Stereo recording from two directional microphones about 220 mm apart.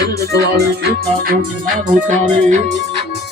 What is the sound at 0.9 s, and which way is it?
Music, 40° right (ahead or behind).